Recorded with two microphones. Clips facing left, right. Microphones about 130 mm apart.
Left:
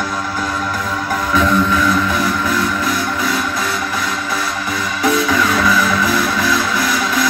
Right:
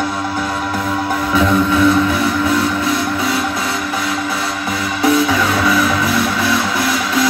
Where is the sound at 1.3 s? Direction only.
30° right (ahead or behind).